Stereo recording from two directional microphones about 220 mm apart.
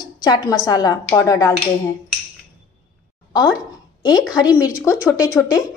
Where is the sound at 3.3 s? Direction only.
15° left (ahead or behind).